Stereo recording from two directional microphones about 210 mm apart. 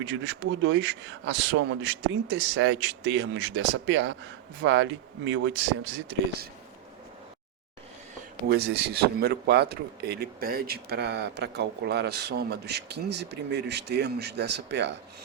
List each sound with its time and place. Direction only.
0.0 s speech: 60° right (ahead or behind)
8.4 s a man's voice: 50° right (ahead or behind)